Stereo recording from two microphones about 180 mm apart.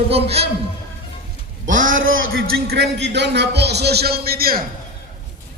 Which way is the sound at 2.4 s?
65° right (ahead or behind).